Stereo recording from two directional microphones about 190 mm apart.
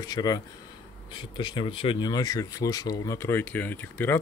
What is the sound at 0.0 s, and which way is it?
Speech, 20° left (ahead or behind).